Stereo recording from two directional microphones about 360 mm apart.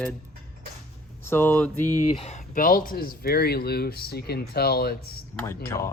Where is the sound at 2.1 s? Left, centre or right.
Centre.